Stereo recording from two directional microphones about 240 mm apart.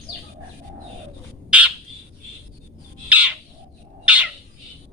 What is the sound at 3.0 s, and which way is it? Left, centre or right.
Bird, centre.